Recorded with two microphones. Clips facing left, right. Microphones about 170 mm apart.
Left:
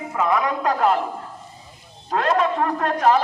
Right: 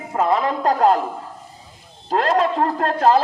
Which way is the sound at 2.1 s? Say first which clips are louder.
Right 2 dB; 35° right (ahead or behind).